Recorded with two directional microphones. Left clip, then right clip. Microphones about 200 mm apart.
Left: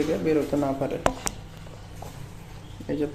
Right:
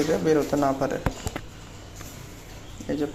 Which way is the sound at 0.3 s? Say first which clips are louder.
Right 3 dB; centre (ahead or behind).